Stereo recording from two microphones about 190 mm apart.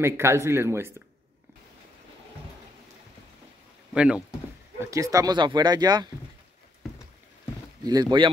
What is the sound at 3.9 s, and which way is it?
Speech, 5° right (ahead or behind).